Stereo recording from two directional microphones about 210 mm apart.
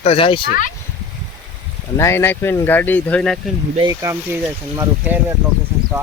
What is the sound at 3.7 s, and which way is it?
Speech, 15° right (ahead or behind).